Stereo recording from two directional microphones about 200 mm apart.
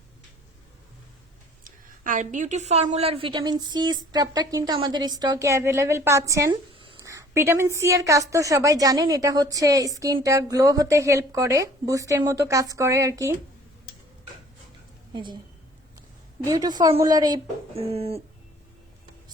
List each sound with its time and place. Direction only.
1.6 s a woman's voice: 40° right (ahead or behind); by 13.3 s 15° right (ahead or behind)
15.1 s a woman's voice: 25° right (ahead or behind)
16.5 s a woman's voice: 20° right (ahead or behind)